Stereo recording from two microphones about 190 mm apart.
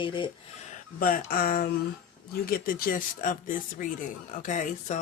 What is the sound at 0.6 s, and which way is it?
Speech, 45° left (ahead or behind).